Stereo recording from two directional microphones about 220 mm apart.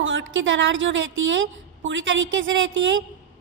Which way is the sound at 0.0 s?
60° right (ahead or behind).